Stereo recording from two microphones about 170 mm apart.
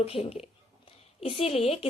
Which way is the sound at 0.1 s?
40° left (ahead or behind).